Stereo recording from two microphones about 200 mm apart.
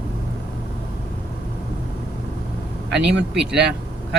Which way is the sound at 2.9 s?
60° right (ahead or behind).